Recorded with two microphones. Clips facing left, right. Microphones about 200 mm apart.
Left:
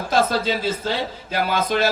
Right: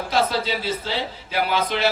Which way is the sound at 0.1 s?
45° left (ahead or behind).